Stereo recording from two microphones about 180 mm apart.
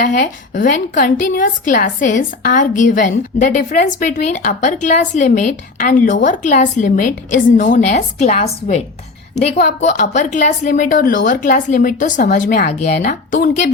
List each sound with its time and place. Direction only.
0.0 s a woman's voice: 45° left (ahead or behind)